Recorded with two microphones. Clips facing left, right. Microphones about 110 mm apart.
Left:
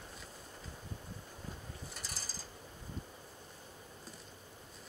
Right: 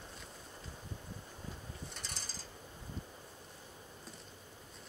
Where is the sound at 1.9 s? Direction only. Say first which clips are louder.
Even; 5° left (ahead or behind).